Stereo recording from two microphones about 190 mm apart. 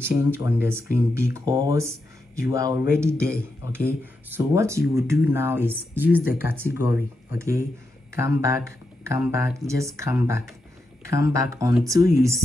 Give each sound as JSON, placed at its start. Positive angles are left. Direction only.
{"t": 0.4, "sound": "speech", "side_deg": -10}